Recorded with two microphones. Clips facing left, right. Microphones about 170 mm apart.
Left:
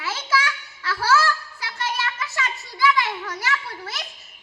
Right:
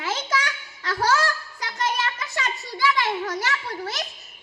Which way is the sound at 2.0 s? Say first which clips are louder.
Even; 35° right (ahead or behind).